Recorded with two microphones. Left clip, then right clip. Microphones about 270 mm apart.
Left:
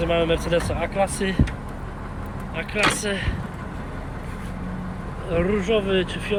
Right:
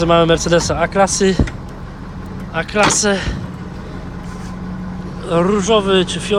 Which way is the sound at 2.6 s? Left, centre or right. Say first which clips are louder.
Right 8 dB; centre.